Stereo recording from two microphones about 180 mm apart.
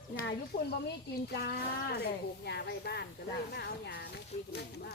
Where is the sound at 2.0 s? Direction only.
65° left (ahead or behind).